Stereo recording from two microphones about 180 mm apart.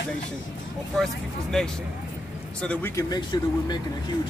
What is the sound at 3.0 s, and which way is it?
Speech, 20° left (ahead or behind).